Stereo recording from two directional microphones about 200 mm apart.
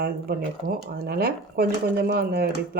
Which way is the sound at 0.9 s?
50° right (ahead or behind).